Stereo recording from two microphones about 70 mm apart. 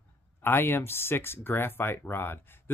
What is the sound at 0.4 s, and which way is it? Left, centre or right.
Speech, left.